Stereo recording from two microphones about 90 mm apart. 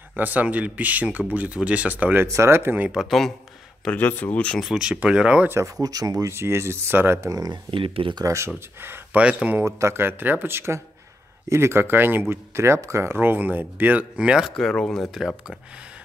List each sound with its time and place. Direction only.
0.1 s speech: 20° right (ahead or behind)
2.2 s speech: 30° right (ahead or behind)
2.9 s speech: centre (ahead or behind)
3.8 s speech: 15° left (ahead or behind)
4.6 s speech: 5° right (ahead or behind)
5.8 s speech: 40° right (ahead or behind); by 7.2 s 25° right (ahead or behind)
7.2 s speech: 45° right (ahead or behind)
7.7 s speech: 80° right
8.8 s speech: 25° right (ahead or behind)
9.2 s speech: 15° right (ahead or behind)
9.6 s speech: 30° right (ahead or behind); by 14.5 s 10° right (ahead or behind)
14.5 s speech: 5° left (ahead or behind)